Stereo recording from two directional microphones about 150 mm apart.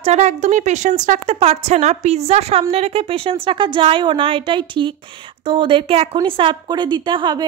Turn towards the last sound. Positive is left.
turn(degrees=-30)  # may be behind; listen again after turning